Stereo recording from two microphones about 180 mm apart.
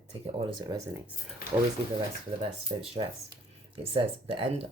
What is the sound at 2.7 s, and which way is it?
Speech, 25° right (ahead or behind).